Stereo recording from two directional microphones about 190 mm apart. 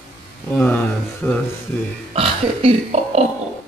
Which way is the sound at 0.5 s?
10° left (ahead or behind).